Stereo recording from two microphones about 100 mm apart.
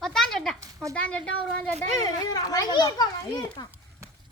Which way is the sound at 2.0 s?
45° left (ahead or behind).